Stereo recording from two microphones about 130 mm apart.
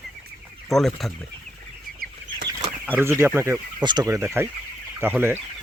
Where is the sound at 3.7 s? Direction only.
35° right (ahead or behind).